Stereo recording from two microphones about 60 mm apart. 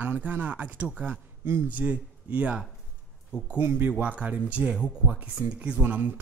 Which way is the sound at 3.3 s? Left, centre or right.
Left.